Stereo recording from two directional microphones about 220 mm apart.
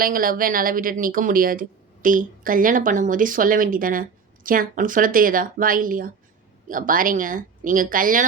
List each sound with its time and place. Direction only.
0.0 s speech: 40° right (ahead or behind)